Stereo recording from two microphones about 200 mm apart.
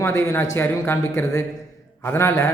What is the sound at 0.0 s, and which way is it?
A man's voice, 15° left (ahead or behind).